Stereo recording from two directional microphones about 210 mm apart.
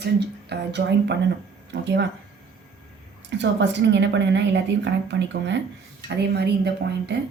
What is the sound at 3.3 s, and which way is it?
A woman's voice, 55° right (ahead or behind).